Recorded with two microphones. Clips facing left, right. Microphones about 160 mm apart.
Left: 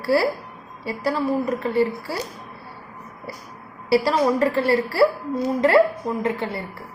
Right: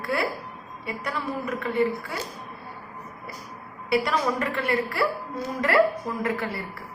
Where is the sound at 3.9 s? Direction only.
30° left (ahead or behind).